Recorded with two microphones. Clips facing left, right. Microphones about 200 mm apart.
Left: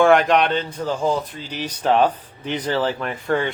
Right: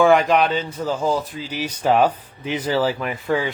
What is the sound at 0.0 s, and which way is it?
Speech, centre (ahead or behind).